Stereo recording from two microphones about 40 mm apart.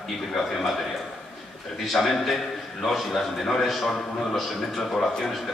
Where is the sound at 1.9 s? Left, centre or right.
Centre.